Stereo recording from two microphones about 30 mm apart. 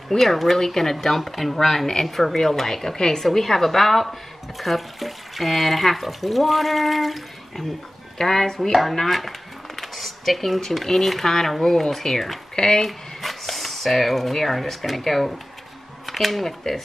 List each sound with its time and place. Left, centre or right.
0.2 s a woman's voice: centre
3.3 s speech: centre
8.2 s speech: centre
12.8 s speech: centre